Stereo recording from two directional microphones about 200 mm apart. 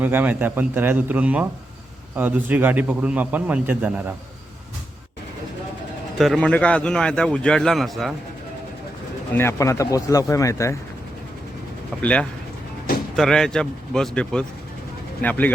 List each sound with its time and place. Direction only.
0.0 s a man's voice: 10° right (ahead or behind)
6.1 s a man's voice: centre (ahead or behind)
9.3 s speech: 10° left (ahead or behind)
13.1 s a man's voice: 5° left (ahead or behind)